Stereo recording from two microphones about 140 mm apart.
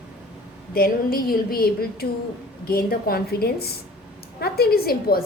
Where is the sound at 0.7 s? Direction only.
90° left.